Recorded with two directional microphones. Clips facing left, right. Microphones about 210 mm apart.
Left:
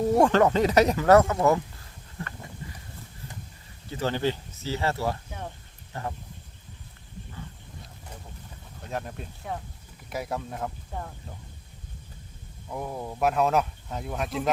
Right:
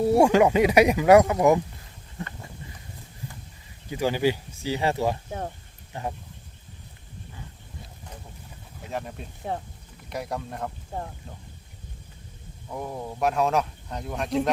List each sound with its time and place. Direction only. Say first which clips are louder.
0.0 s speech: right 2 dB; 10° right (ahead or behind)
3.8 s speech: right 3 dB; 10° right (ahead or behind)
8.8 s speech: right 1 dB; centre (ahead or behind)
9.4 s speech: right 4 dB; 30° right (ahead or behind)
10.1 s speech: even; centre (ahead or behind)
12.6 s speech: even; centre (ahead or behind)